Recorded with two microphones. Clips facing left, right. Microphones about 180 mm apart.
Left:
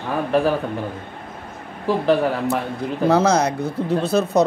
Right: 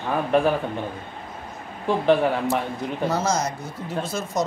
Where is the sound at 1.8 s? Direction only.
35° left (ahead or behind).